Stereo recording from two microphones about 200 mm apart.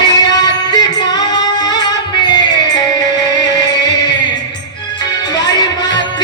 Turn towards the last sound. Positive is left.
turn(degrees=20)  # may be behind; listen again after turning